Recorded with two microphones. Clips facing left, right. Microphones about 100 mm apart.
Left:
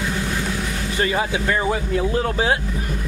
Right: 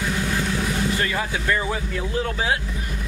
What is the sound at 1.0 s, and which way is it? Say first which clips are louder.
Speech: left 3 dB; 25° left (ahead or behind).